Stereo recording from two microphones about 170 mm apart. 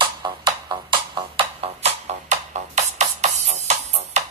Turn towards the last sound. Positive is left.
turn(degrees=-40)  # may be behind; listen again after turning